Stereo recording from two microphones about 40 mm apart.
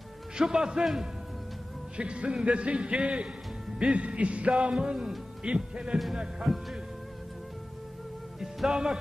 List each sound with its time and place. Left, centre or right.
0.4 s a man's voice: centre
2.0 s a man's voice: right
6.4 s music: centre
8.6 s music: centre